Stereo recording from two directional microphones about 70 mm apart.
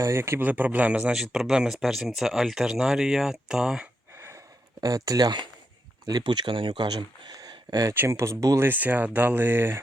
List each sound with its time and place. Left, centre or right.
0.0 s speech: right
0.4 s speech: right
1.1 s speech: centre
4.1 s a sound: right
4.8 s speech: right
7.9 s speech: right
8.5 s speech: right